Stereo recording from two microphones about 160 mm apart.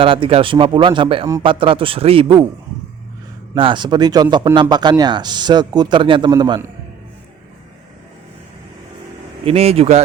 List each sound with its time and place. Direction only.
0.0 s speech: 35° right (ahead or behind)
3.5 s a man's voice: 30° right (ahead or behind)
9.4 s speech: 40° right (ahead or behind)